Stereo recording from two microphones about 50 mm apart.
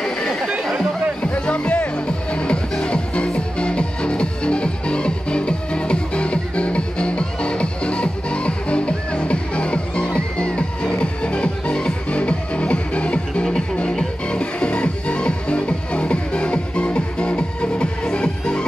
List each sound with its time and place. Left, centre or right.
1.2 s music: left